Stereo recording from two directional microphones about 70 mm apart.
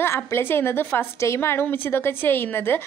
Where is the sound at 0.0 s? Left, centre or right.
Left.